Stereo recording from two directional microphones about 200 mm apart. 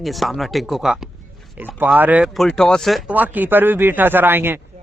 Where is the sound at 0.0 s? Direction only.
Centre (ahead or behind).